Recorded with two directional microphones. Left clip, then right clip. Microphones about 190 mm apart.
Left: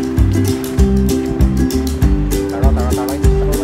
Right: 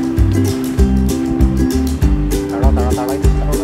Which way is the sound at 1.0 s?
Centre (ahead or behind).